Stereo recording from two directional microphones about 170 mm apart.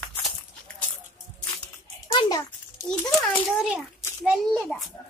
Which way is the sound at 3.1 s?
Centre (ahead or behind).